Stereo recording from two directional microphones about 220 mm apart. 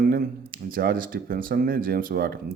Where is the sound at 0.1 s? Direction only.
40° right (ahead or behind).